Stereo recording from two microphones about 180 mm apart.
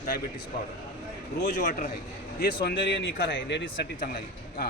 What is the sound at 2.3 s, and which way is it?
Speech, 60° left (ahead or behind).